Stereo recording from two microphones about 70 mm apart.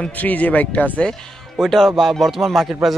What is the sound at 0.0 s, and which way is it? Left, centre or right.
Speech, left.